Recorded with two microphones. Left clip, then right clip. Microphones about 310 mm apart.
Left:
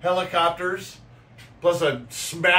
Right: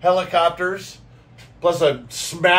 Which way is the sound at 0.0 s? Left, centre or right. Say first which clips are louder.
Right 5 dB; centre.